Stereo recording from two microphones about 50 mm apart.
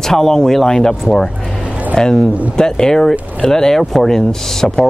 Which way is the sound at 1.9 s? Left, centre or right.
Centre.